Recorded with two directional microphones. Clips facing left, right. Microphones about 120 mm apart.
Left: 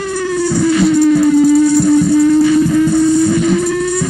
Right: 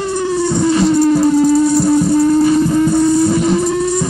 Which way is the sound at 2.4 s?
35° right (ahead or behind).